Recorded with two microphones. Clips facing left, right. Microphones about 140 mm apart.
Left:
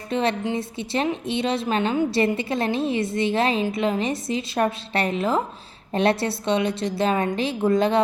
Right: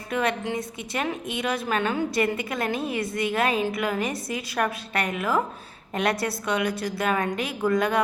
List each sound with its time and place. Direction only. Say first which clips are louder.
0.1 s a woman's voice: left 3 dB; 30° left (ahead or behind)